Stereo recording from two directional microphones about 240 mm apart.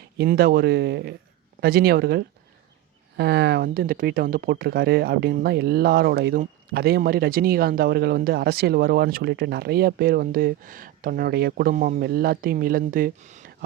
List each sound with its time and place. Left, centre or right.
0.2 s speech: right